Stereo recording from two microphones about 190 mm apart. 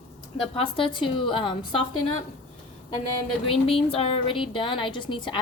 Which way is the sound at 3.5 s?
30° left (ahead or behind).